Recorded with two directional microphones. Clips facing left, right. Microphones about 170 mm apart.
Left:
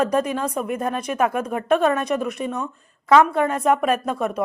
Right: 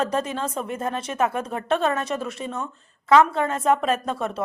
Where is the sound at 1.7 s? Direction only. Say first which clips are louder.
Left 4 dB; 15° left (ahead or behind).